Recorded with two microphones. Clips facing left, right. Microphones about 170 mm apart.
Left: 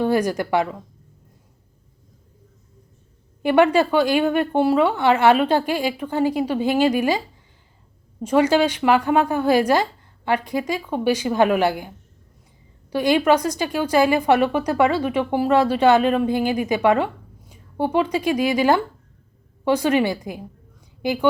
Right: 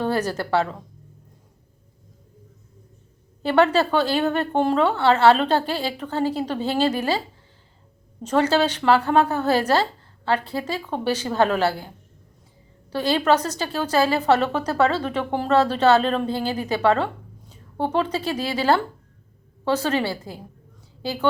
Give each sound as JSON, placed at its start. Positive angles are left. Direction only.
{"t": 0.0, "sound": "a woman's voice", "side_deg": 10}
{"t": 3.4, "sound": "a woman's voice", "side_deg": 15}
{"t": 8.2, "sound": "a woman's voice", "side_deg": 10}
{"t": 12.9, "sound": "a woman's voice", "side_deg": 15}